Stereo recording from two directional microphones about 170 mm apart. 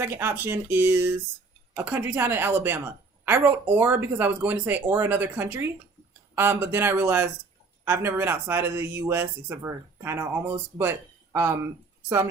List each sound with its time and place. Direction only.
0.0 s a woman's voice: 15° right (ahead or behind)